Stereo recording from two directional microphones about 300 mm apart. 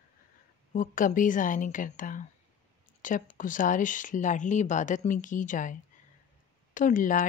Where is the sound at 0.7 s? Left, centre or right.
Left.